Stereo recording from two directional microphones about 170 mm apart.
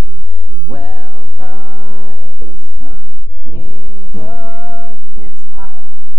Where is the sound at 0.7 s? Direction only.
25° right (ahead or behind).